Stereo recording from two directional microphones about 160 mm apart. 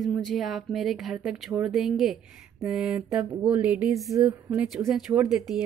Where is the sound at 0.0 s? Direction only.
Centre (ahead or behind).